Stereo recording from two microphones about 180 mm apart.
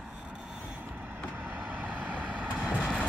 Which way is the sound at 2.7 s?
5° left (ahead or behind).